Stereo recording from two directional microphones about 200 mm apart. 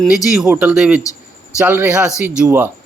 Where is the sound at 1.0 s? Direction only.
15° left (ahead or behind).